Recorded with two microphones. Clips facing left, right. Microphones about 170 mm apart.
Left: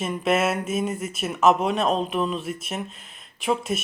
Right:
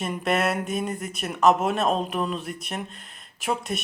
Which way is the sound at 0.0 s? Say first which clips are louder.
Left 2 dB; centre (ahead or behind).